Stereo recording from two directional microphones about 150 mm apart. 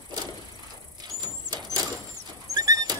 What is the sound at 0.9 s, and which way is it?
Squeal, 25° right (ahead or behind).